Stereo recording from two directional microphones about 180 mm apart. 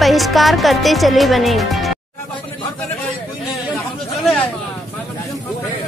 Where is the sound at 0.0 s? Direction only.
Centre (ahead or behind).